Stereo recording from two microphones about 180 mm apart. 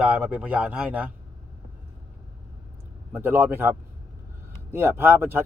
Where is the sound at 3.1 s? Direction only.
10° right (ahead or behind).